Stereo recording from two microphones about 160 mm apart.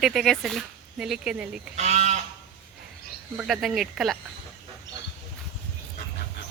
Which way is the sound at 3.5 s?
Centre (ahead or behind).